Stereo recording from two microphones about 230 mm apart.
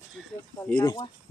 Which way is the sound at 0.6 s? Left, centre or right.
Centre.